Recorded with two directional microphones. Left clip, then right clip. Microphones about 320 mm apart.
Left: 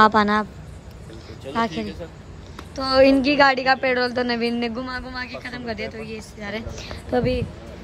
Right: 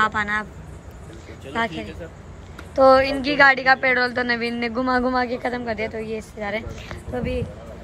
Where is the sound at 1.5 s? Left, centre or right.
Centre.